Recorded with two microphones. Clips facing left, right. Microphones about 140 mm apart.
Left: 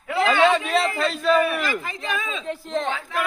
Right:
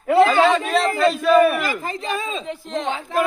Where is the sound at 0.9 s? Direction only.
Centre (ahead or behind).